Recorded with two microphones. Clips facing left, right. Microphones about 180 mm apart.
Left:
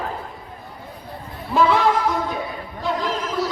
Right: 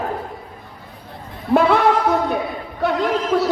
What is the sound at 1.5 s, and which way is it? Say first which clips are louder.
A man's voice: right 3 dB; 60° right (ahead or behind).